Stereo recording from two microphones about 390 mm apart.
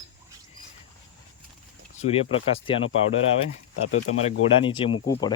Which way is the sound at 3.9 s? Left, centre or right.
Left.